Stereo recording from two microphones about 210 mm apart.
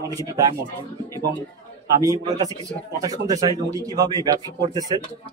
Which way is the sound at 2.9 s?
15° right (ahead or behind).